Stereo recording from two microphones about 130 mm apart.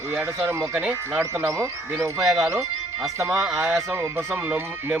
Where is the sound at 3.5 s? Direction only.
5° right (ahead or behind).